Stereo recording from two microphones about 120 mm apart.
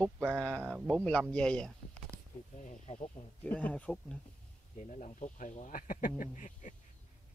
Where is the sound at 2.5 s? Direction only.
80° left.